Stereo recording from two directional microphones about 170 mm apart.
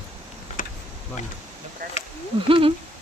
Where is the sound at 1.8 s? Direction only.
55° right (ahead or behind).